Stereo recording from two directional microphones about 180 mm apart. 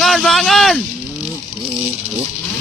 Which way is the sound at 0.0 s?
Centre (ahead or behind).